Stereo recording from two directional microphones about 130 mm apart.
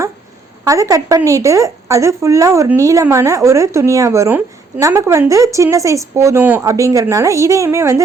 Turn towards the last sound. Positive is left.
turn(degrees=-20)  # may be behind; listen again after turning